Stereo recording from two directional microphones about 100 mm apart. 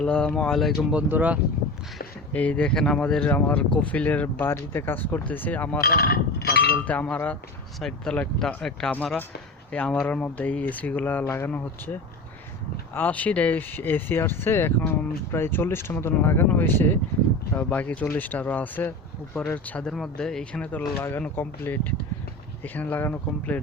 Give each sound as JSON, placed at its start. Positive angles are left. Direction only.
{"t": 0.0, "sound": "speech", "side_deg": 10}
{"t": 0.9, "sound": "speech", "side_deg": -15}
{"t": 2.3, "sound": "speech", "side_deg": 15}
{"t": 6.8, "sound": "speech", "side_deg": 15}